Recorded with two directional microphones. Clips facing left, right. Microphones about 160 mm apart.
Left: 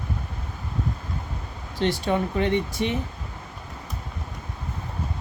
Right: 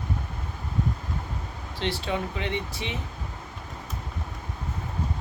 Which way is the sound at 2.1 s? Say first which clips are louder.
Left 6 dB; 50° left (ahead or behind).